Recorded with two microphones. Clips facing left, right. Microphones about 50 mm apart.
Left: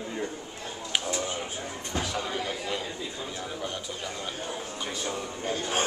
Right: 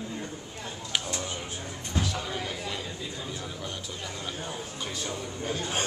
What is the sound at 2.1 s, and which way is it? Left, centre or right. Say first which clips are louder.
Speech: left 2 dB; centre.